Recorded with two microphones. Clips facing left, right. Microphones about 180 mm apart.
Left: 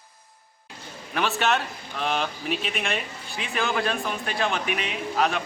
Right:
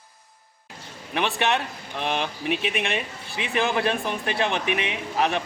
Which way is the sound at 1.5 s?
20° right (ahead or behind).